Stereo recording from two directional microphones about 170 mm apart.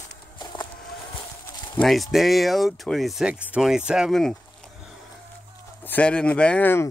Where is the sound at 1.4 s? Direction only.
25° left (ahead or behind).